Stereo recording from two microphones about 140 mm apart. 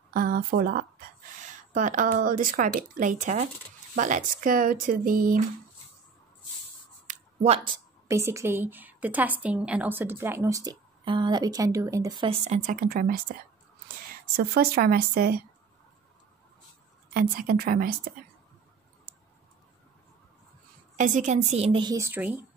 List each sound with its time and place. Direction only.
0.1 s speech: 90° right
1.4 s a woman's voice: 70° right (ahead or behind)
7.1 s a sound: 45° right (ahead or behind)
8.1 s a woman's voice: 20° right (ahead or behind)
12.3 s speech: 55° right (ahead or behind)
12.7 s speech: 90° right
14.4 s speech: 90° right
17.1 s speech: 90° right
21.0 s a woman's voice: 65° right (ahead or behind); by 21.8 s 45° right (ahead or behind)
21.8 s speech: 20° right (ahead or behind)